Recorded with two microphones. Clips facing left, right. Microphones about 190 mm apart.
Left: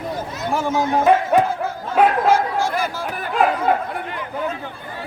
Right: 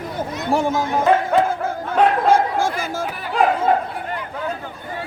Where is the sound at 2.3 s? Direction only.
50° right (ahead or behind).